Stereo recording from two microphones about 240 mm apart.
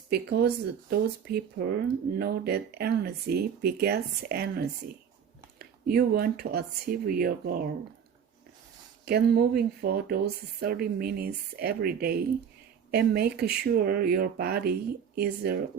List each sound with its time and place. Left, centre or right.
0.1 s speech: right
9.0 s speech: right